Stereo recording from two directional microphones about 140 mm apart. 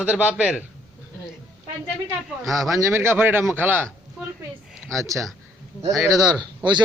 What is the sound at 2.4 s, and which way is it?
Speech, centre (ahead or behind).